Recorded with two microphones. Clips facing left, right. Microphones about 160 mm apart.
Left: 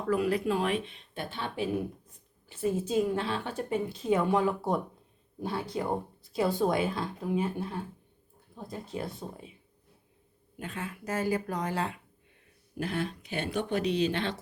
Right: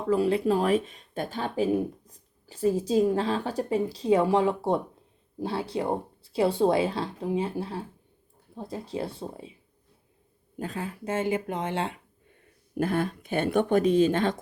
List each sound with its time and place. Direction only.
0.1 s speech: 30° right (ahead or behind)
10.6 s speech: 35° right (ahead or behind)
12.7 s speech: 50° right (ahead or behind)